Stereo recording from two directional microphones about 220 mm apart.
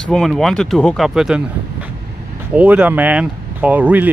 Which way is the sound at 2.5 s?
5° right (ahead or behind).